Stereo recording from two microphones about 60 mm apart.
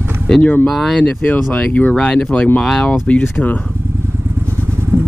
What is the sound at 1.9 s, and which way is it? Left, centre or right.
Speech, centre.